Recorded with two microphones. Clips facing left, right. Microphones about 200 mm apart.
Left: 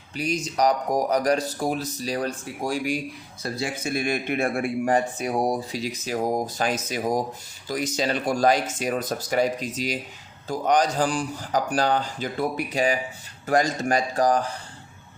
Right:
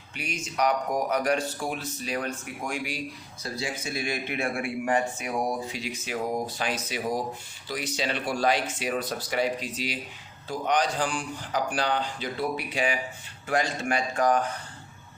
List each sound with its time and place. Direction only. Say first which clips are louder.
0.2 s speech: left 5 dB; 35° left (ahead or behind)
3.4 s speech: left 4 dB; 55° left (ahead or behind); by 14.5 s 35° left (ahead or behind)